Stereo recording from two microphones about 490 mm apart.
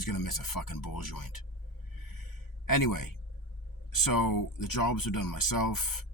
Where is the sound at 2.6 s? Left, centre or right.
Left.